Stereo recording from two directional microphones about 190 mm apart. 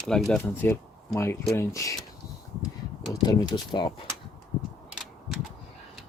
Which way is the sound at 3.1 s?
20° left (ahead or behind).